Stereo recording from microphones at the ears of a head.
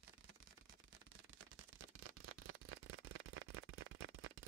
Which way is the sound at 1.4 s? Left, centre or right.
Right.